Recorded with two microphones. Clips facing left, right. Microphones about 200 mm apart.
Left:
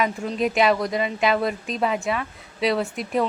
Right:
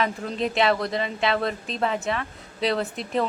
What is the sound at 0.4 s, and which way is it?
Speech, 15° left (ahead or behind).